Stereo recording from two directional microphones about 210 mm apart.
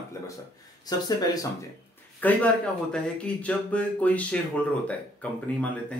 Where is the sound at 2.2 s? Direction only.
10° left (ahead or behind).